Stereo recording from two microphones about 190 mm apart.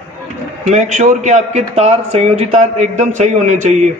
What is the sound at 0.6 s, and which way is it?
Speech, 40° right (ahead or behind).